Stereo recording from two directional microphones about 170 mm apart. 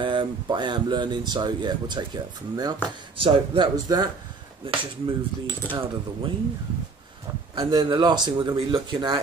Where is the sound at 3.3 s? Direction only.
25° right (ahead or behind).